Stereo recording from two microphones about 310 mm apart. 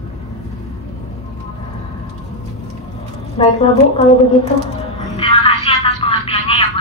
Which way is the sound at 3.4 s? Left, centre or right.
Centre.